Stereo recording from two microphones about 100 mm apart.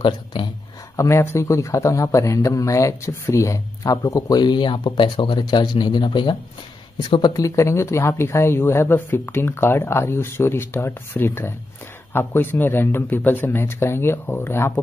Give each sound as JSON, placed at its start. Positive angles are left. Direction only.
{"t": 0.0, "sound": "speech", "side_deg": 55}
{"t": 0.9, "sound": "speech", "side_deg": 25}
{"t": 7.3, "sound": "speech", "side_deg": 30}